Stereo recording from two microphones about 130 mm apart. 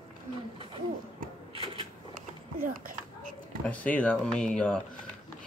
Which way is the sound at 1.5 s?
45° right (ahead or behind).